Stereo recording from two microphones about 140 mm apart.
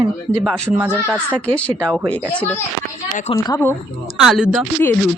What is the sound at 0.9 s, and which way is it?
Speech, 10° left (ahead or behind).